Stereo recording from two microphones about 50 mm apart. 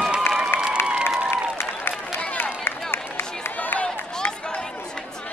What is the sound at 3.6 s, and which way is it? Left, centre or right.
Run, left.